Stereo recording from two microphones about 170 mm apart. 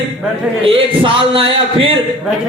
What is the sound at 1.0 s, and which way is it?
Speech, 30° right (ahead or behind).